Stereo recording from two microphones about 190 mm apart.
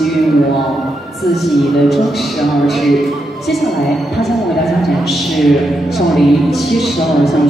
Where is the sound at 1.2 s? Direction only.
Centre (ahead or behind).